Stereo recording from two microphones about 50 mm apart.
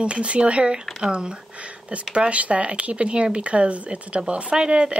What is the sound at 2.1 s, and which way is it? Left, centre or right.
Speech, right.